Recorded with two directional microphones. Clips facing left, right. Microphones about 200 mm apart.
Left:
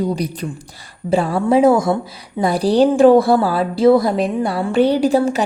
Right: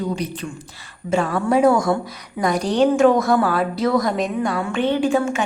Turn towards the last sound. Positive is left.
turn(degrees=35)  # may be behind; listen again after turning